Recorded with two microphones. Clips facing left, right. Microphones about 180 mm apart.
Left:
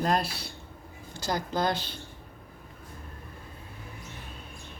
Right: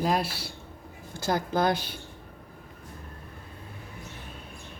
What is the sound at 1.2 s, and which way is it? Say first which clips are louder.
Speech: right 3 dB; 55° right (ahead or behind).